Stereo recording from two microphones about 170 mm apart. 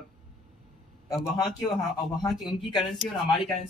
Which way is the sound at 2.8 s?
Centre (ahead or behind).